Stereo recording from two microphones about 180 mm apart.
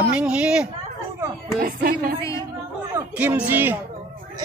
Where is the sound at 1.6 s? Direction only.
50° right (ahead or behind).